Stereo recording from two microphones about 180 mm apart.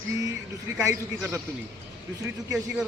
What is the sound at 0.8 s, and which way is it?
Speech, 15° right (ahead or behind).